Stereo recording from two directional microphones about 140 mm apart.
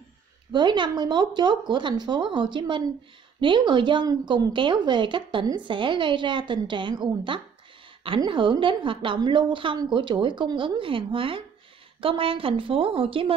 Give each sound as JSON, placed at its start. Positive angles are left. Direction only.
{"t": 0.5, "sound": "a woman's voice", "side_deg": -35}